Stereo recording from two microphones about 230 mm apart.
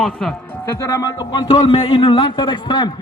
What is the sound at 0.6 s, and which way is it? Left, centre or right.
Speech, centre.